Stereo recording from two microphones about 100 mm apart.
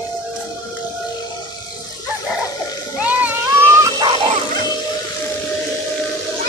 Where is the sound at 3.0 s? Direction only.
15° right (ahead or behind).